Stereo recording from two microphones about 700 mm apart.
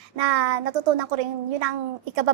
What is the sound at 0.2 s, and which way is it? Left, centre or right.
A child's voice, right.